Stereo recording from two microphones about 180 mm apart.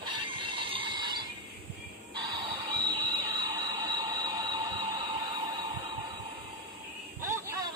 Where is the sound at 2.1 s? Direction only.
25° right (ahead or behind).